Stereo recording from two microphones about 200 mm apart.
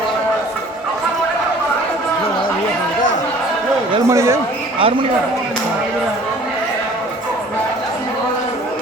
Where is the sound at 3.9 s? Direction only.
15° right (ahead or behind).